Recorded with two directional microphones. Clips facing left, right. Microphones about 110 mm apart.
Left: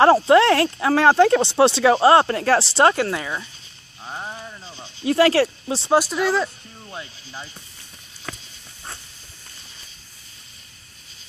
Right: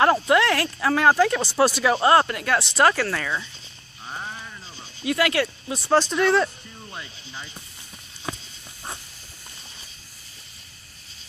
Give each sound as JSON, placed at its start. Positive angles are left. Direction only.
{"t": 0.0, "sound": "speech", "side_deg": 30}
{"t": 5.0, "sound": "speech", "side_deg": 30}
{"t": 5.9, "sound": "speech", "side_deg": 10}
{"t": 8.3, "sound": "insect", "side_deg": -20}